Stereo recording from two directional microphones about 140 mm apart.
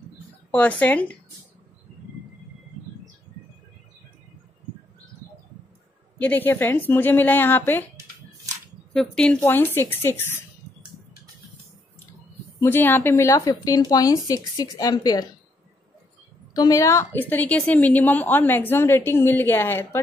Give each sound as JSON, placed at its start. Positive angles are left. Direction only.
{"t": 0.5, "sound": "a woman's voice", "side_deg": 10}
{"t": 6.1, "sound": "a woman's voice", "side_deg": 10}
{"t": 8.9, "sound": "a woman's voice", "side_deg": 5}
{"t": 12.5, "sound": "speech", "side_deg": 15}
{"t": 16.5, "sound": "a woman's voice", "side_deg": 25}